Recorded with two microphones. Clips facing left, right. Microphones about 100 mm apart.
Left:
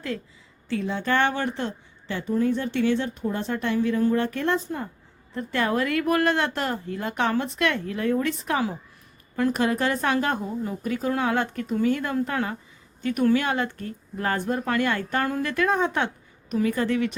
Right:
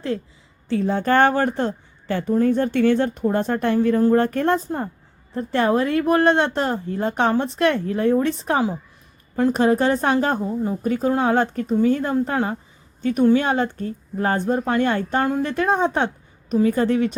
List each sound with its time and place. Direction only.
0.7 s a woman's voice: 40° right (ahead or behind)